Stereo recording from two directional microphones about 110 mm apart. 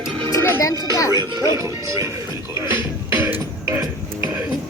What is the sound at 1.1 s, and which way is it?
Speech, 35° right (ahead or behind).